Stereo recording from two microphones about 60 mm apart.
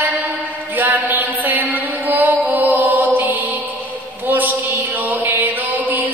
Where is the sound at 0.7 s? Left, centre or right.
Right.